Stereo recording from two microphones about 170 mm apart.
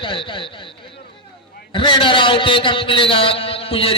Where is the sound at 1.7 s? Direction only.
30° left (ahead or behind).